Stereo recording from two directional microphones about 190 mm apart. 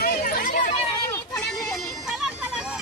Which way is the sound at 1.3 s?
Centre (ahead or behind).